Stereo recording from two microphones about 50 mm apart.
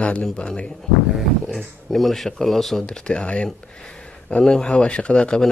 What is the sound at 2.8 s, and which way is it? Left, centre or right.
A man's voice, centre.